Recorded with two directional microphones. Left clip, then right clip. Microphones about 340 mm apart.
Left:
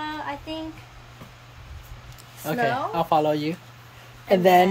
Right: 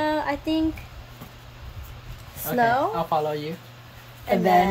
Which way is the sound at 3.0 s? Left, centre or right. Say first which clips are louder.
Left 3 dB; left.